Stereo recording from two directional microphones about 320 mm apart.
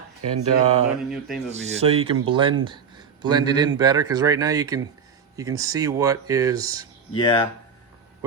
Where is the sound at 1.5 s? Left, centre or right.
Centre.